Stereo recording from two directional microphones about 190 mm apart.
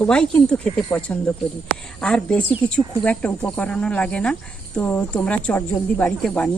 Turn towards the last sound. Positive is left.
turn(degrees=5)  # may be behind; listen again after turning